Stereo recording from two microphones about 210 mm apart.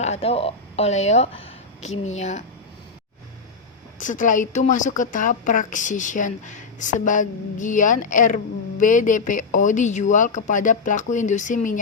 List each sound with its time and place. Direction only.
0.0 s speech: 30° left (ahead or behind)
4.0 s speech: 40° left (ahead or behind)